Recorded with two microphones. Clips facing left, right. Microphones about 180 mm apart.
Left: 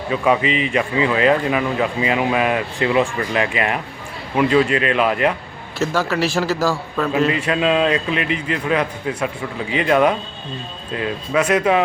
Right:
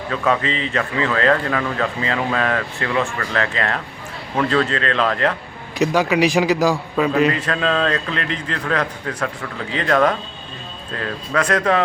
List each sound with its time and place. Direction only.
0.1 s speech: 15° left (ahead or behind)
5.8 s a man's voice: 15° right (ahead or behind)
7.1 s speech: 5° left (ahead or behind)